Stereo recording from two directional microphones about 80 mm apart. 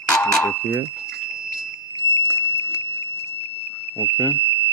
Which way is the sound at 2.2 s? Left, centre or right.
Left.